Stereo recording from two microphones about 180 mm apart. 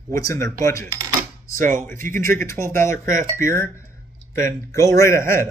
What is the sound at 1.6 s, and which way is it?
Speech, 45° right (ahead or behind).